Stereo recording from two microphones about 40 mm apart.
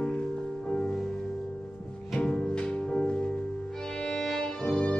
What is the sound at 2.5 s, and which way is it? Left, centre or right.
Music, left.